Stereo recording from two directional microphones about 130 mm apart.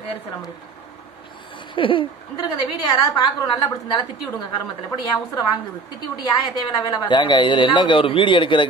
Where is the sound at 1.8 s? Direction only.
40° left (ahead or behind).